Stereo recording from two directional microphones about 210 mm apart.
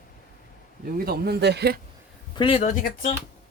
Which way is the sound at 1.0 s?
50° right (ahead or behind).